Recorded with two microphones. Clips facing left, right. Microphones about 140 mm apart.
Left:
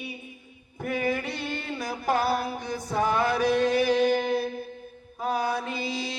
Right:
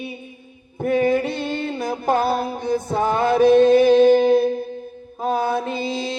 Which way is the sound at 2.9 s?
25° right (ahead or behind).